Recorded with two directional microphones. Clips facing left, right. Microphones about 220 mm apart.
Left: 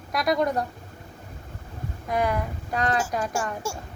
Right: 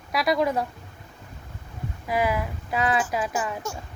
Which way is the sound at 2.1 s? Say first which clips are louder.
Even; 5° right (ahead or behind).